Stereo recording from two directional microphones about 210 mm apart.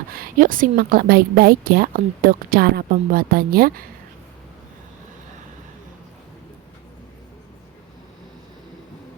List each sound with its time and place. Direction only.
0.1 s a woman's voice: 45° right (ahead or behind)